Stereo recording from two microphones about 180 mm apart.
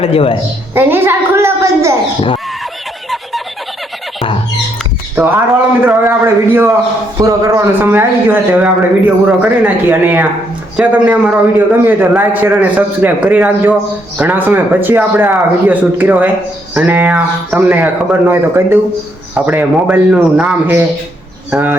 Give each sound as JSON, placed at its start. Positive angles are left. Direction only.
{"t": 0.0, "sound": "a woman's voice", "side_deg": 30}
{"t": 0.7, "sound": "a man's voice", "side_deg": -10}
{"t": 5.1, "sound": "a man's voice", "side_deg": -10}